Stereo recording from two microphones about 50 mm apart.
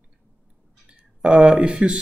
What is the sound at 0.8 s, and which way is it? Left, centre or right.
Speech, right.